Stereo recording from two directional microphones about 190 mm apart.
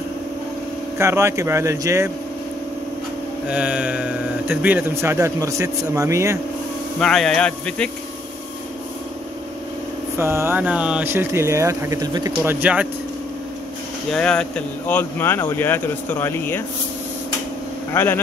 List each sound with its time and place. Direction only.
0.9 s speech: 15° right (ahead or behind)
3.4 s speech: 5° right (ahead or behind)
7.0 s speech: 5° left (ahead or behind)
10.1 s speech: 15° right (ahead or behind)
14.1 s speech: 5° left (ahead or behind)
17.9 s speech: 10° left (ahead or behind)